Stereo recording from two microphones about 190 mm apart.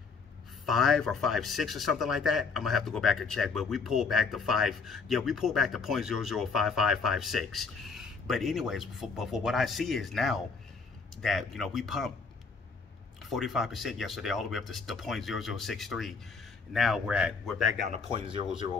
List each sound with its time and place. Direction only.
0.7 s a man's voice: centre (ahead or behind)
13.2 s a man's voice: centre (ahead or behind)
17.8 s speech: 35° right (ahead or behind)